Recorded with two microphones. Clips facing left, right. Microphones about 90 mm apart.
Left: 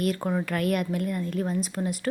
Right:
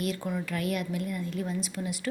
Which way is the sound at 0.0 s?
50° left (ahead or behind).